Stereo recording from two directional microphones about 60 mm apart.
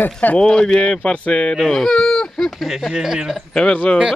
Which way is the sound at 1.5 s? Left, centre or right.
Centre.